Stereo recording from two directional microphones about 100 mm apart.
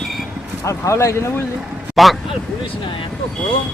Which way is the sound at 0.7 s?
30° left (ahead or behind).